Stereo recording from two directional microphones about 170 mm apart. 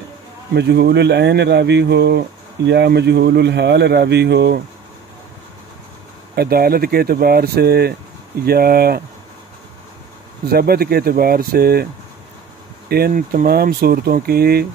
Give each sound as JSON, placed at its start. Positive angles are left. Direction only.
{"t": 0.6, "sound": "speech", "side_deg": -75}
{"t": 6.3, "sound": "speech", "side_deg": -65}
{"t": 10.5, "sound": "speech", "side_deg": -65}
{"t": 12.9, "sound": "speech", "side_deg": -60}